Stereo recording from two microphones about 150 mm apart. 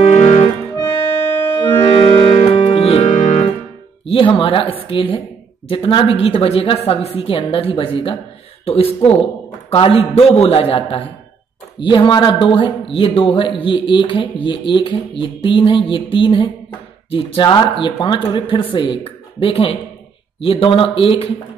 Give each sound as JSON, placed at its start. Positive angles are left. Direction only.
{"t": 0.0, "sound": "music", "side_deg": 45}
{"t": 1.9, "sound": "music", "side_deg": 40}
{"t": 4.0, "sound": "a man's voice", "side_deg": 35}